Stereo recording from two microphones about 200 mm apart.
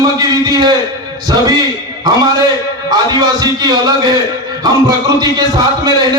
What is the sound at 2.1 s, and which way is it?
A man's voice, 20° right (ahead or behind).